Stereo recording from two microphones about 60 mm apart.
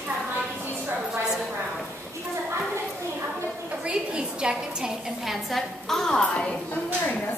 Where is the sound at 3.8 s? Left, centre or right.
Centre.